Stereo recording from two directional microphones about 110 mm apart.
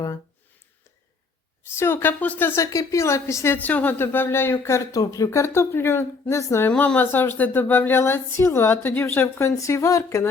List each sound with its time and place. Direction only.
1.6 s a woman's voice: 20° left (ahead or behind)
6.7 s a woman's voice: 15° left (ahead or behind)